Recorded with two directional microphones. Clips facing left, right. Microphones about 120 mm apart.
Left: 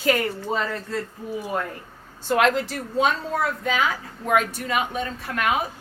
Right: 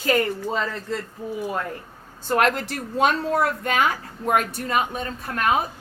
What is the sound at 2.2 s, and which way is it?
A woman's voice, 45° right (ahead or behind).